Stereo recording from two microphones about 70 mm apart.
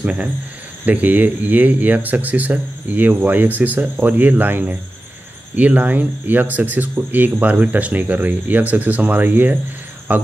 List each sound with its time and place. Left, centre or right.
0.0 s speech: centre